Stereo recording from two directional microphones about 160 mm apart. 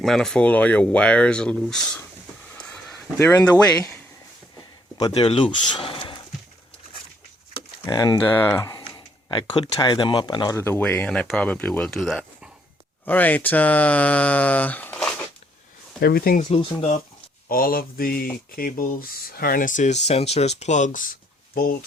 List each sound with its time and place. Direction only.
0.0 s speech: centre (ahead or behind)
2.6 s a sound: 5° left (ahead or behind)
3.7 s speech: 10° left (ahead or behind)
4.9 s speech: 25° left (ahead or behind)
7.5 s a sound: 30° left (ahead or behind)
8.3 s speech: 10° left (ahead or behind)
10.5 s speech: 15° left (ahead or behind)
13.1 s speech: 10° left (ahead or behind)
16.0 s speech: 75° left (ahead or behind)
16.5 s speech: 35° left (ahead or behind)
17.5 s mantra: 65° left (ahead or behind)
18.5 s speech: 65° left (ahead or behind)
21.5 s speech: 65° left (ahead or behind)